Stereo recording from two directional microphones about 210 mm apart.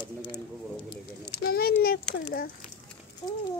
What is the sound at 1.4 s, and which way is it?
Speech, 45° left (ahead or behind).